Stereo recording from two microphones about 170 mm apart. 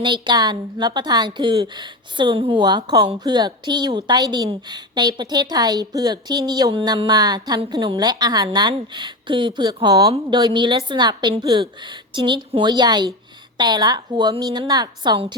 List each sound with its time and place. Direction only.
0.0 s a woman's voice: 25° right (ahead or behind)